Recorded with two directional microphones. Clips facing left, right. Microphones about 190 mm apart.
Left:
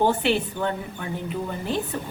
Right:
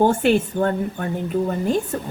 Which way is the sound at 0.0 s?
45° right (ahead or behind).